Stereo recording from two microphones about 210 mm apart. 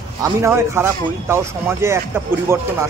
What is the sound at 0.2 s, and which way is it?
Speech, 15° right (ahead or behind).